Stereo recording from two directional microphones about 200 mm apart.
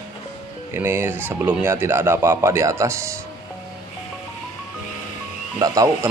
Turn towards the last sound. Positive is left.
turn(degrees=-15)  # may be behind; listen again after turning